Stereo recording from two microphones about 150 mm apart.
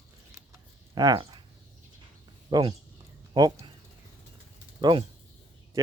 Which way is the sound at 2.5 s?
25° right (ahead or behind).